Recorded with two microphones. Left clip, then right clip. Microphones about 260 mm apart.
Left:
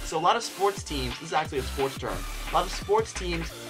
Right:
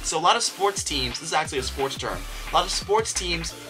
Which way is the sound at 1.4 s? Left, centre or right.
Centre.